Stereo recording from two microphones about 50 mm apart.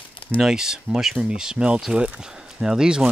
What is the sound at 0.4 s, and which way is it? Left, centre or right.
Speech, centre.